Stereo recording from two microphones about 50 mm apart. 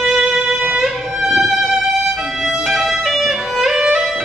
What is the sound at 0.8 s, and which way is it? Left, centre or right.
Music, centre.